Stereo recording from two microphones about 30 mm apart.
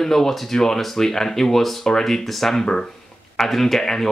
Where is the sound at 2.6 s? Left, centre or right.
Centre.